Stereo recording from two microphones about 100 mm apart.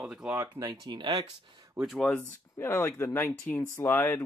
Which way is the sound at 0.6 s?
45° right (ahead or behind).